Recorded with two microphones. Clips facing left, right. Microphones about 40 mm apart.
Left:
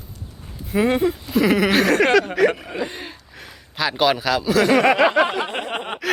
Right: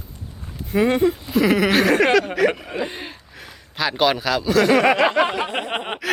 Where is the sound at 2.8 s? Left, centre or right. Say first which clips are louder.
Right 1 dB; centre.